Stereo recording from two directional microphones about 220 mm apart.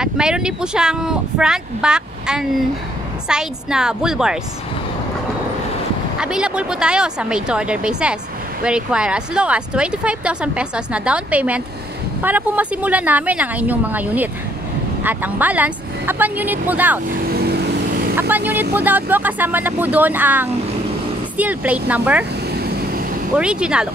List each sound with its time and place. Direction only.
0.0 s speech: 5° right (ahead or behind)
6.1 s speech: 5° right (ahead or behind)
17.3 s vehicle: 45° right (ahead or behind)
18.1 s speech: 10° right (ahead or behind)
22.5 s a sound: 45° right (ahead or behind)
23.3 s speech: 5° right (ahead or behind)